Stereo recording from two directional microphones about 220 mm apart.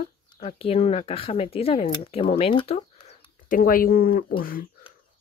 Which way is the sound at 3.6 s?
40° left (ahead or behind).